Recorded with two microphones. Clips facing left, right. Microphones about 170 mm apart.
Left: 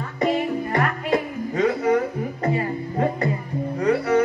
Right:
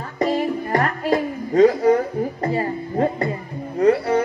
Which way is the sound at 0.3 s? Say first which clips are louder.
Right 2 dB; 35° right (ahead or behind).